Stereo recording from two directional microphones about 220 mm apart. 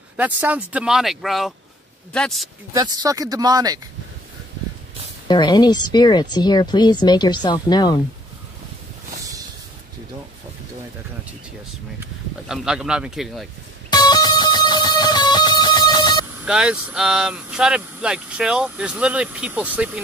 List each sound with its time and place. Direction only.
0.2 s speech: 5° right (ahead or behind)
2.7 s speech: 15° right (ahead or behind)
5.3 s speech: 20° left (ahead or behind)
12.0 s speech: 5° right (ahead or behind)
13.8 s music: 20° left (ahead or behind)
16.4 s speech: 5° right (ahead or behind)